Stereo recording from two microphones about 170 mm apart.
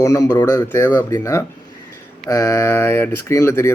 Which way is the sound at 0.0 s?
20° left (ahead or behind).